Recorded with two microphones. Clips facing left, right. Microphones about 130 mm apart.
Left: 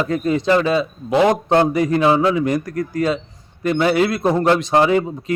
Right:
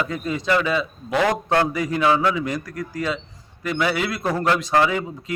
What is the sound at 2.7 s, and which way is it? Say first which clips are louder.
Speech: left 7 dB; 50° left (ahead or behind).